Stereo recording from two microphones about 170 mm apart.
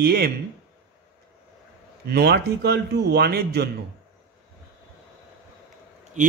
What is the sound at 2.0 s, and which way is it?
A man's voice, 70° right (ahead or behind).